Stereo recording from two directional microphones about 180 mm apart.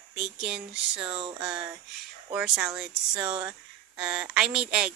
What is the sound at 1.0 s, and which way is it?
Speech, 25° right (ahead or behind).